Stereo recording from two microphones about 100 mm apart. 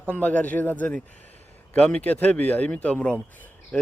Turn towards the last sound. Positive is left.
turn(degrees=15)  # may be behind; listen again after turning